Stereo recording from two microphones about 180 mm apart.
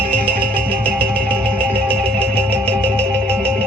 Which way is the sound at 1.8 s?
30° right (ahead or behind).